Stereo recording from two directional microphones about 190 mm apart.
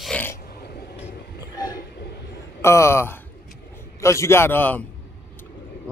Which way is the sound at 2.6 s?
15° left (ahead or behind).